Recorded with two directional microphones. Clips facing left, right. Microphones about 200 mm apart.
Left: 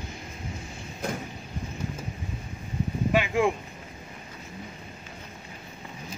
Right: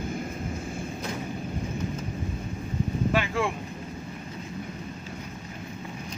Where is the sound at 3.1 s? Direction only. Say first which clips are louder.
Left 3 dB; 15° left (ahead or behind).